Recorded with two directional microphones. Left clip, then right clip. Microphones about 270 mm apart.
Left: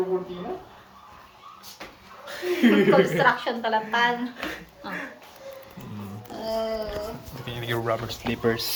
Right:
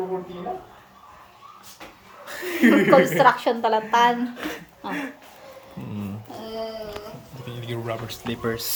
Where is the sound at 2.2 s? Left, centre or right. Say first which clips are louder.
Right 2 dB; right.